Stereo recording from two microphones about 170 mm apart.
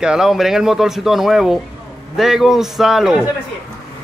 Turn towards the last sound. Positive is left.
turn(degrees=0)  # may be behind; listen again after turning